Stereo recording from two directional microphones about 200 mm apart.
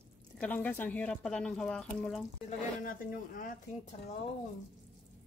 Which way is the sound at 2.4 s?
45° left (ahead or behind).